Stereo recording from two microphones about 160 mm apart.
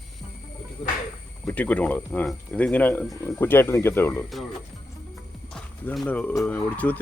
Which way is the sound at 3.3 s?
15° left (ahead or behind).